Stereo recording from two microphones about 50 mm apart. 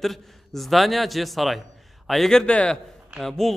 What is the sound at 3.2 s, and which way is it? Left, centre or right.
Speech, centre.